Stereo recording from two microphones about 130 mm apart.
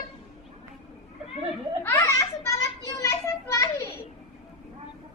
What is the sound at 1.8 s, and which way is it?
Children playing, 20° left (ahead or behind).